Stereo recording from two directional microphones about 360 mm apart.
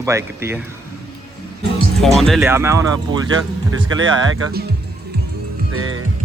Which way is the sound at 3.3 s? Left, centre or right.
Right.